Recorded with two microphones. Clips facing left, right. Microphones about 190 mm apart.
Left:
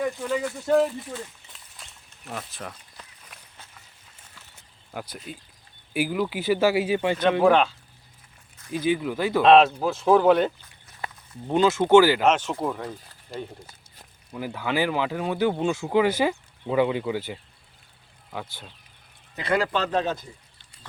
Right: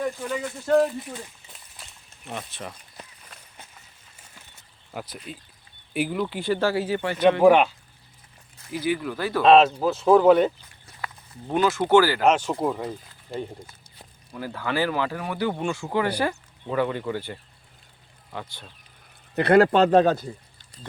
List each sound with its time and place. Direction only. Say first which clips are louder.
0.0 s speech: left 2 dB; 5° left (ahead or behind)
1.8 s a sound: even; centre (ahead or behind)
2.5 s speech: right 1 dB; centre (ahead or behind)
4.9 s speech: even; centre (ahead or behind); by 7.2 s 15° left (ahead or behind)
7.4 s speech: right 3 dB; 15° right (ahead or behind)
8.7 s speech: left 2 dB; 20° left (ahead or behind)
9.4 s speech: even; centre (ahead or behind)
11.0 s speech: left 1 dB; 20° left (ahead or behind)
12.4 s speech: right 2 dB; 15° right (ahead or behind)
14.3 s speech: left 1 dB; 15° left (ahead or behind)
19.4 s speech: right 8 dB; 60° right (ahead or behind)
19.7 s speech: right 8 dB; 40° right (ahead or behind)